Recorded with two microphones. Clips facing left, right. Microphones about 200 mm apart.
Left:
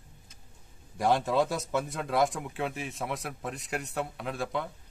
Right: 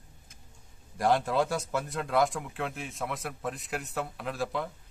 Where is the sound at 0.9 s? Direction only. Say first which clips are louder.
Even; centre (ahead or behind).